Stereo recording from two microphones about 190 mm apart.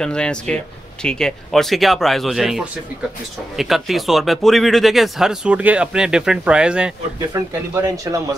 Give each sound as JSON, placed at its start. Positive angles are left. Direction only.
{"t": 0.0, "sound": "speech", "side_deg": 5}
{"t": 7.3, "sound": "speech", "side_deg": -15}